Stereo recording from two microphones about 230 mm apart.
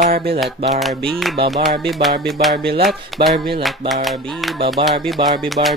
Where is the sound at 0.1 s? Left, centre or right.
Right.